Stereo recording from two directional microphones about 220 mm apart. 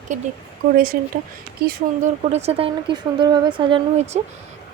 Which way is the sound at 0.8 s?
40° right (ahead or behind).